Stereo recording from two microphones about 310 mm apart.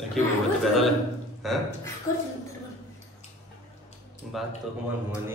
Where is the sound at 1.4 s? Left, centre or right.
Centre.